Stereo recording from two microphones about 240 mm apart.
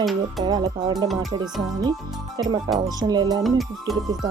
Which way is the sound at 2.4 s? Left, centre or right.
Centre.